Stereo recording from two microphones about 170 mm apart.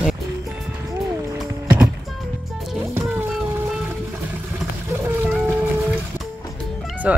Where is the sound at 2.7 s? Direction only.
10° right (ahead or behind).